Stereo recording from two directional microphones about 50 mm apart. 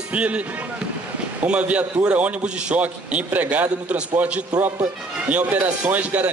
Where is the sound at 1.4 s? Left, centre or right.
Right.